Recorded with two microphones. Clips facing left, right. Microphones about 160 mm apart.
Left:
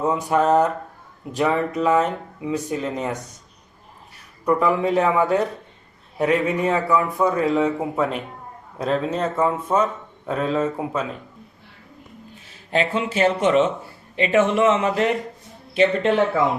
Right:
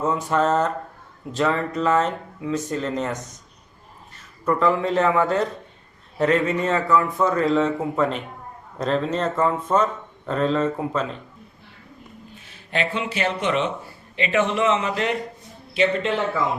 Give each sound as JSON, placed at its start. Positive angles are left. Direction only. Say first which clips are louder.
{"t": 0.0, "sound": "speech", "louder": "left 2 dB", "side_deg": 15}
{"t": 12.7, "sound": "speech", "louder": "left 4 dB", "side_deg": 45}